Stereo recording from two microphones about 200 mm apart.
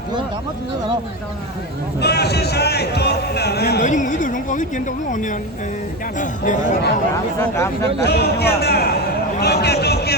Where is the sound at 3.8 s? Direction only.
40° left (ahead or behind).